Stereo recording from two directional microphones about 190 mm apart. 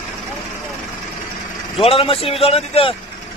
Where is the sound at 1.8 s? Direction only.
30° left (ahead or behind).